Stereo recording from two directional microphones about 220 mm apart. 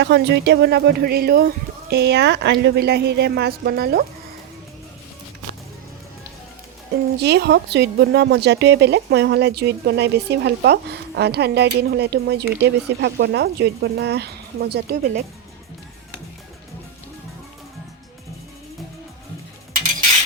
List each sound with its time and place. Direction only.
0.0 s a woman's voice: 50° right (ahead or behind)
7.2 s a woman's voice: 50° right (ahead or behind)